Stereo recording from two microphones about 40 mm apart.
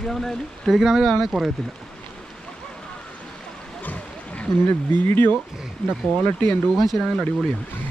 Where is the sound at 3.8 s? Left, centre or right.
Left.